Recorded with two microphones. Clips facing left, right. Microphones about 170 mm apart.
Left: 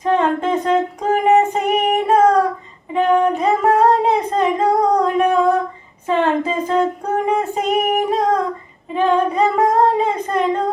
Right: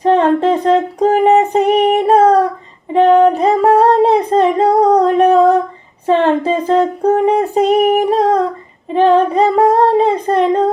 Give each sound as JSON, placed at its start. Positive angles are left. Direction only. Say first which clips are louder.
{"t": 0.0, "sound": "female singing", "louder": "right 6 dB", "side_deg": -35}
{"t": 2.9, "sound": "singing", "louder": "right 6 dB", "side_deg": -35}
{"t": 6.1, "sound": "female singing", "louder": "right 5 dB", "side_deg": -35}
{"t": 8.9, "sound": "child singing", "louder": "right 6 dB", "side_deg": -35}